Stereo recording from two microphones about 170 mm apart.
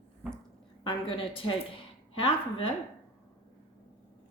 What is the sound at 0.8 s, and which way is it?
Speech, 30° left (ahead or behind).